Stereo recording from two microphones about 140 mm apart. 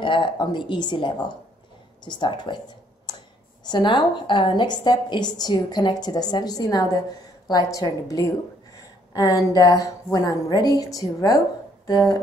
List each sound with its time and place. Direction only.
0.0 s a woman's voice: 35° left (ahead or behind)
3.1 s a sound: 30° left (ahead or behind)
3.6 s a woman's voice: 35° left (ahead or behind)